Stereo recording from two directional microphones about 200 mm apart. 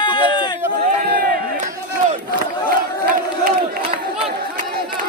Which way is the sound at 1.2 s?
50° right (ahead or behind).